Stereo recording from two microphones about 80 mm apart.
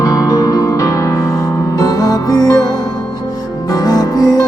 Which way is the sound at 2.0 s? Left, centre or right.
Left.